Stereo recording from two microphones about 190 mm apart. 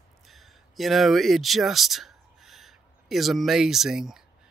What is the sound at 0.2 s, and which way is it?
Speech, centre (ahead or behind).